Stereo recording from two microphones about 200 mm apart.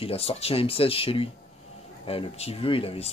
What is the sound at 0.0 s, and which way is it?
A man's voice, 30° left (ahead or behind).